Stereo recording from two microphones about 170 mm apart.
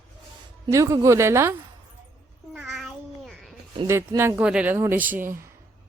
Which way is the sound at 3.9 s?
15° right (ahead or behind).